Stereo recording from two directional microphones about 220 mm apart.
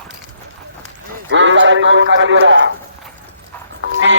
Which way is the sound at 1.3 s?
55° right (ahead or behind).